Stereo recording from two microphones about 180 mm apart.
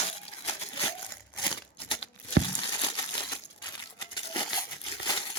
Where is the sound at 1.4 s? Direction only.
30° left (ahead or behind).